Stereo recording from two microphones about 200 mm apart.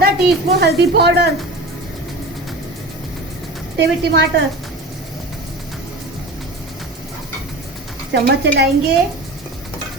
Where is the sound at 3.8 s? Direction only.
50° right (ahead or behind).